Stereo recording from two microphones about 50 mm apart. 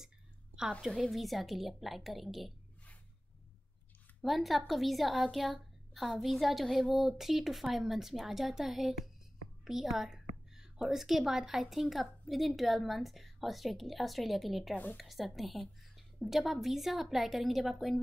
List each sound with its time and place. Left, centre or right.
0.8 s a woman's voice: centre
4.2 s a woman's voice: centre